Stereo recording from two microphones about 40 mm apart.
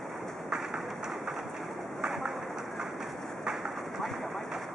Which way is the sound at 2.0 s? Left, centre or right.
Centre.